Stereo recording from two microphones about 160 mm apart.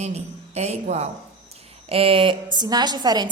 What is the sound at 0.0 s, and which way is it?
A woman's voice, 45° right (ahead or behind).